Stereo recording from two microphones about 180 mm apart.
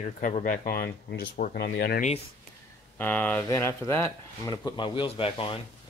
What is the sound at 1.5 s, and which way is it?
Speech, 65° left (ahead or behind).